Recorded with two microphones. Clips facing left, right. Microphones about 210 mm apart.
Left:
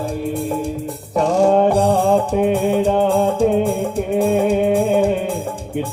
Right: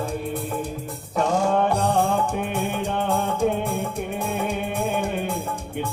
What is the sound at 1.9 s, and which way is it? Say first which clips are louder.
Music: left 7 dB; 60° left (ahead or behind).